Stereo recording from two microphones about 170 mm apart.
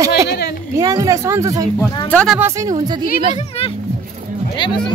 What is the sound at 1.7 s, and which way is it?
Speech, 5° left (ahead or behind).